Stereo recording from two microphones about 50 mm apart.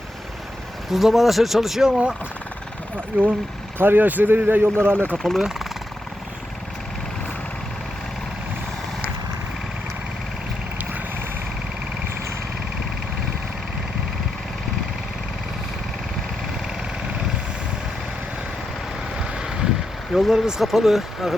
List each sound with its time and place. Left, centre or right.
0.9 s speech: centre
3.1 s speech: right
5.1 s speech: centre
5.4 s speech: centre
19.3 s vehicle: centre
20.1 s speech: centre